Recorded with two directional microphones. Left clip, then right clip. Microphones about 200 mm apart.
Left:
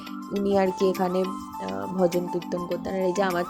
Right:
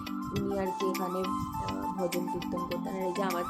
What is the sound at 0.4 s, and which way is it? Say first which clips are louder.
Speech: left 11 dB; 35° left (ahead or behind).